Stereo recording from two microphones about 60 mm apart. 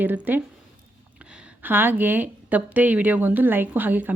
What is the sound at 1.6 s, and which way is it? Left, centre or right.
A woman's voice, right.